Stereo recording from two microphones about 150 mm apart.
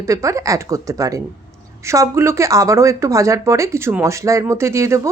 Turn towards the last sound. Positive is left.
turn(degrees=-20)  # may be behind; listen again after turning